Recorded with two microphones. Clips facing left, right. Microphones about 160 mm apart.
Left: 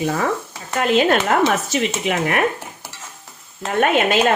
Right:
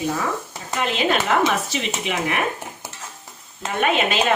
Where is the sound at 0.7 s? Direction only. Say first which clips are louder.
Left 5 dB; 50° left (ahead or behind).